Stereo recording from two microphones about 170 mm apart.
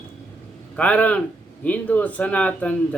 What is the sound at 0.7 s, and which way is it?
Speech, 10° left (ahead or behind).